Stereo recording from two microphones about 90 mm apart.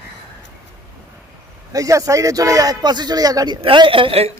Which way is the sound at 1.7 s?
40° right (ahead or behind).